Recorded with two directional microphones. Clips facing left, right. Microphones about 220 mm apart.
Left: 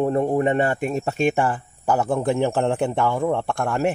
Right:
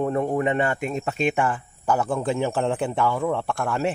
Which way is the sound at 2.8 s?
45° left (ahead or behind).